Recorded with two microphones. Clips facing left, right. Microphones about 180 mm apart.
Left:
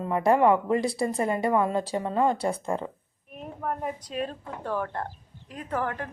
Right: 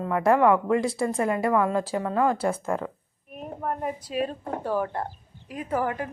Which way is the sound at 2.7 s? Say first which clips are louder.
Right 1 dB; 25° left (ahead or behind).